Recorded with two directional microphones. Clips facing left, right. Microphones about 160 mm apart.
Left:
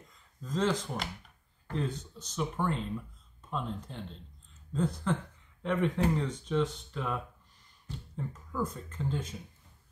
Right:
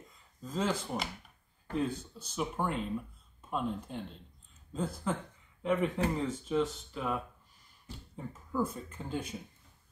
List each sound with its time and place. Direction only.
0.4 s speech: 10° right (ahead or behind)
8.2 s speech: 10° right (ahead or behind)